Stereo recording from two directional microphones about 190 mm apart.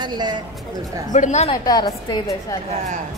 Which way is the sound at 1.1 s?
40° left (ahead or behind).